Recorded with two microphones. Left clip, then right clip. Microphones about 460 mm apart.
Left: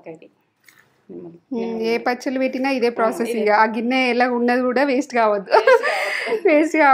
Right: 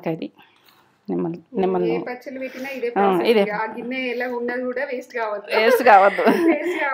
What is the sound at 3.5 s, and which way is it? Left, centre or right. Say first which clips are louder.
A woman's voice: left 10 dB; left.